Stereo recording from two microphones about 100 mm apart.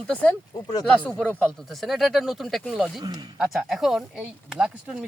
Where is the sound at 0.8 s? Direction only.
10° left (ahead or behind).